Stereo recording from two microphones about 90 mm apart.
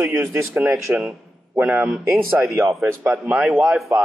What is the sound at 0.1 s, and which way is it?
Speech, 30° right (ahead or behind).